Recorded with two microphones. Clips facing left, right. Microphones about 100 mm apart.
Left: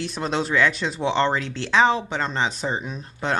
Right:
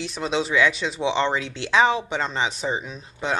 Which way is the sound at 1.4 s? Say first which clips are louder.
Left 1 dB; 40° left (ahead or behind).